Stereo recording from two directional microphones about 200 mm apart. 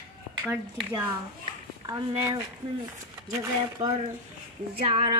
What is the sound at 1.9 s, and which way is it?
A woman's voice, 15° right (ahead or behind).